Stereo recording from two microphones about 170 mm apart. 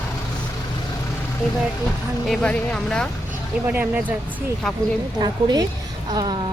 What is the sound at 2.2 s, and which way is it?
Speech, 5° left (ahead or behind).